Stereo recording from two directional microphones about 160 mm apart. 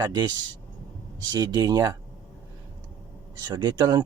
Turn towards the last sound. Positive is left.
turn(degrees=-30)  # may be behind; listen again after turning